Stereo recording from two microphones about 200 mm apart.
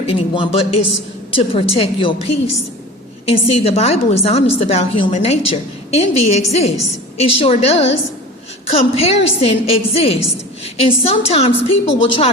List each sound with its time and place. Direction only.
0.0 s a woman's voice: 25° left (ahead or behind)